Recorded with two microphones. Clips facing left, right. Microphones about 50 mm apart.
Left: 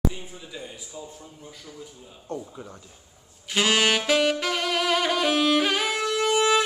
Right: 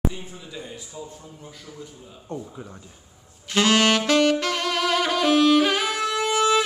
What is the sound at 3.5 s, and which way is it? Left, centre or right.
Saxophone, centre.